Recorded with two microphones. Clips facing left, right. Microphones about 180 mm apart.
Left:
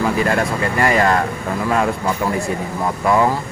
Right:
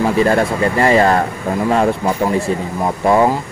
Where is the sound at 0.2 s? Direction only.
30° right (ahead or behind).